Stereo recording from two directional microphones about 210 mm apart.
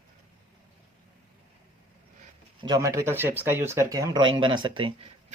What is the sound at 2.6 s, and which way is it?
Speech, 20° right (ahead or behind).